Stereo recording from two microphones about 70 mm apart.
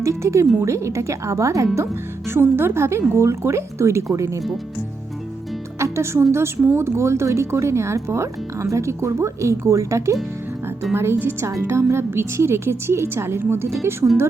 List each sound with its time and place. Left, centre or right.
0.0 s speech: right
2.3 s a woman's voice: right
5.8 s a woman's voice: right